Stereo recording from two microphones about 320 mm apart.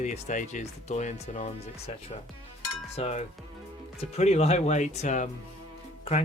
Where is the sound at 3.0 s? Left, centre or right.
Centre.